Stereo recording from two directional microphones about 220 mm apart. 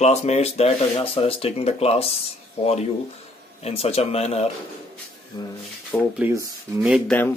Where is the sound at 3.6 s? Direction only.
25° left (ahead or behind).